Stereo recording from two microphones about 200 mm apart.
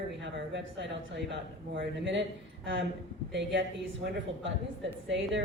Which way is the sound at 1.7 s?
65° right (ahead or behind).